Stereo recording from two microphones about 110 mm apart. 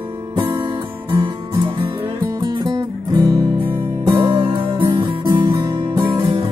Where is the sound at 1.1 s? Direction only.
45° right (ahead or behind).